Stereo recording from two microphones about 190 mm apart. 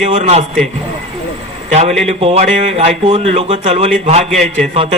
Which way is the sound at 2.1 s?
30° right (ahead or behind).